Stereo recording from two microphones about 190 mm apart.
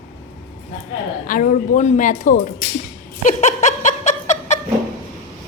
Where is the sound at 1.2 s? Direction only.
45° left (ahead or behind).